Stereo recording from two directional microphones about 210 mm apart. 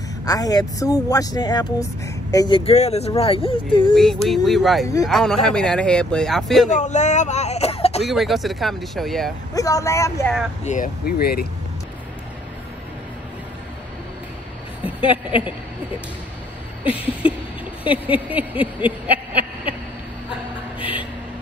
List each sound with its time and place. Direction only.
0.2 s speech: 15° left (ahead or behind)
3.9 s speech: centre (ahead or behind)
6.7 s speech: 35° left (ahead or behind)
8.0 s speech: centre (ahead or behind)
9.5 s speech: 15° left (ahead or behind)
10.6 s speech: 35° left (ahead or behind)
15.0 s speech: 25° left (ahead or behind)
16.8 s a sound: 5° right (ahead or behind)